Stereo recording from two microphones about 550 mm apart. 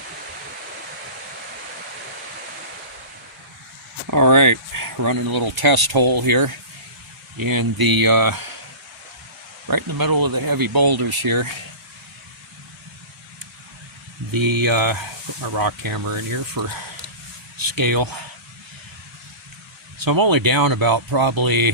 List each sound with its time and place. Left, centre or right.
4.0 s speech: right
9.6 s speech: right
14.3 s speech: right
17.6 s speech: right
20.0 s speech: right